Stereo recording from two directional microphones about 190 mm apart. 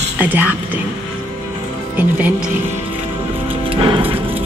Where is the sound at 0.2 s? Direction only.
10° right (ahead or behind).